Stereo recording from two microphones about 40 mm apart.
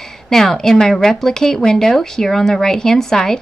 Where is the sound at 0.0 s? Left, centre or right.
Centre.